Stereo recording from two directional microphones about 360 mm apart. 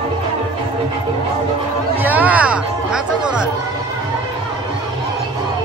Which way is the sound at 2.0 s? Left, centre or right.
Centre.